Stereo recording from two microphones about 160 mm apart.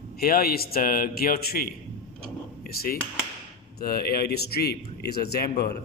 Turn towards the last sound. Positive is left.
turn(degrees=80)